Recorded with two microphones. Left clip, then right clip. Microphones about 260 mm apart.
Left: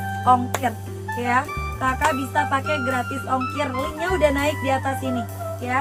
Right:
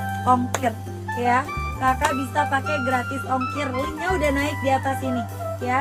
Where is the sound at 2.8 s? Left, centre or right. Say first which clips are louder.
Right 1 dB; centre.